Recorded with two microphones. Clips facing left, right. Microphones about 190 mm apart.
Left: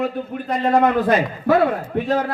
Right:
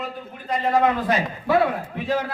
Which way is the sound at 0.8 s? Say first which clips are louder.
Left 4 dB; 55° left (ahead or behind).